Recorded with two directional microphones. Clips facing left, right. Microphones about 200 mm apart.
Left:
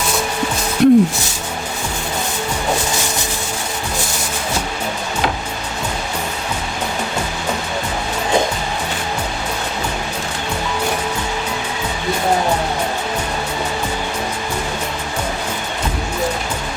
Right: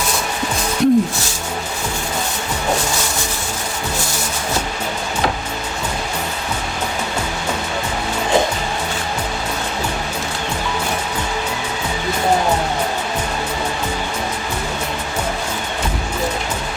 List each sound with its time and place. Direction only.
0.8 s speech: 65° left (ahead or behind)